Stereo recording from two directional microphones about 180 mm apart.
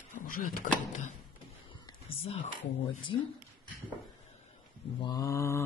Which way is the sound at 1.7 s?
30° left (ahead or behind).